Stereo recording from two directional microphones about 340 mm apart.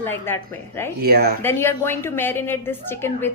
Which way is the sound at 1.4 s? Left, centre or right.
Centre.